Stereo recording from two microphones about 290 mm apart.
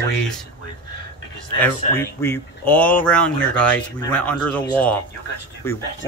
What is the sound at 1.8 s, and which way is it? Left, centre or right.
Speech, left.